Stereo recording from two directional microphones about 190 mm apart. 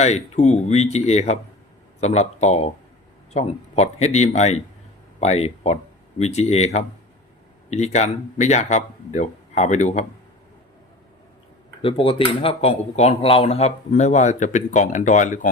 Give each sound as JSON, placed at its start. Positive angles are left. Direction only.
{"t": 0.0, "sound": "speech", "side_deg": 35}
{"t": 11.8, "sound": "speech", "side_deg": 30}